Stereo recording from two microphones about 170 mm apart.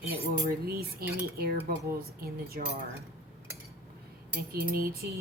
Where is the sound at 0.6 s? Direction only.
65° right (ahead or behind).